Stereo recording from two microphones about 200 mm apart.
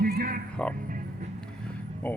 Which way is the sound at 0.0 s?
50° right (ahead or behind).